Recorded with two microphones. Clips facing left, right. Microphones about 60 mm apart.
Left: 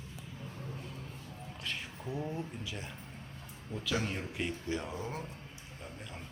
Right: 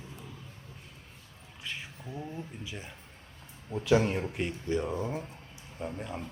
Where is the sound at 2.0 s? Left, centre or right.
Centre.